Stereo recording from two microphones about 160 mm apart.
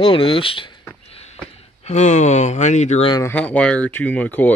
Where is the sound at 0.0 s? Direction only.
30° left (ahead or behind).